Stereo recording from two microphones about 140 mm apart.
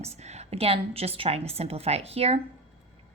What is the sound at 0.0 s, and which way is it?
A woman's voice, 50° right (ahead or behind).